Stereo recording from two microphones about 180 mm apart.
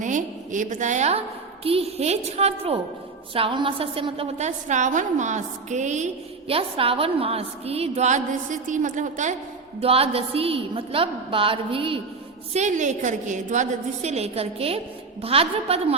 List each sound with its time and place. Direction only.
0.0 s a woman's voice: 45° right (ahead or behind)
9.8 s a woman's voice: 30° right (ahead or behind)
12.5 s a woman's voice: 40° right (ahead or behind)